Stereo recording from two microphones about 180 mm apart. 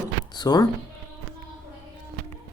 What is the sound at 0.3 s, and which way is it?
Speech, 20° left (ahead or behind).